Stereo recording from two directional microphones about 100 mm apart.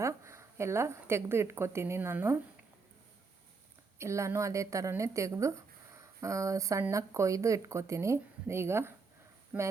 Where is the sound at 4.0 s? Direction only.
30° right (ahead or behind).